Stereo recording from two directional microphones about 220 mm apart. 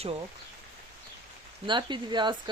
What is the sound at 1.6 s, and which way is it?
Speech, 20° right (ahead or behind).